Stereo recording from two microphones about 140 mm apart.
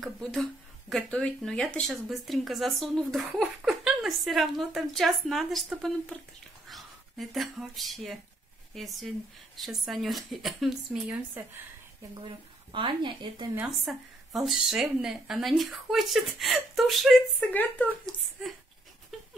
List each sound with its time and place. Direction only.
0.0 s speech: centre (ahead or behind)
12.7 s speech: 35° right (ahead or behind)
13.7 s speech: centre (ahead or behind)
17.5 s speech: 10° left (ahead or behind)
19.1 s a sound: centre (ahead or behind)